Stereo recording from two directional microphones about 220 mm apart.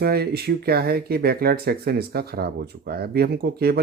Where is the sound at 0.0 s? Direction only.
45° right (ahead or behind).